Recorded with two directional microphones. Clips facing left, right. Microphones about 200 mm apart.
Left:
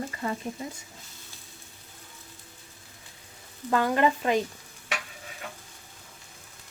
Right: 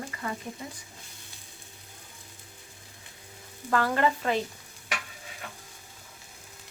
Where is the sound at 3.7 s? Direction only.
20° left (ahead or behind).